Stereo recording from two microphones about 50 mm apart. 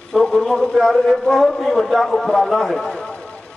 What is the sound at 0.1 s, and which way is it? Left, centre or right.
A man's voice, centre.